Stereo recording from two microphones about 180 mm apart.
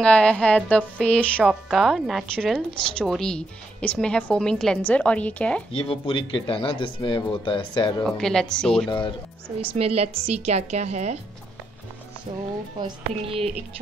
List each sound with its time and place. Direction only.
0.0 s speech: 5° left (ahead or behind)
5.7 s speech: 30° left (ahead or behind)
8.0 s speech: 5° left (ahead or behind)
9.6 s a woman's voice: 30° right (ahead or behind)
12.3 s a woman's voice: 35° right (ahead or behind)